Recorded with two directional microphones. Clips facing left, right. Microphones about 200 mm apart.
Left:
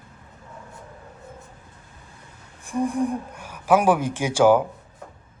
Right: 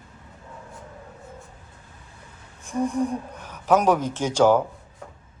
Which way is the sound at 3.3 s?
10° left (ahead or behind).